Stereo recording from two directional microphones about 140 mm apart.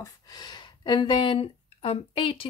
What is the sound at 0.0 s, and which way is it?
Speech, 30° left (ahead or behind).